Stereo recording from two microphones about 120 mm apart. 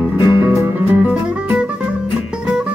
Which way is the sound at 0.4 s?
20° right (ahead or behind).